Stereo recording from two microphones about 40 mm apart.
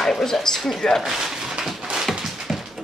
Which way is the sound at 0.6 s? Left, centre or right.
Centre.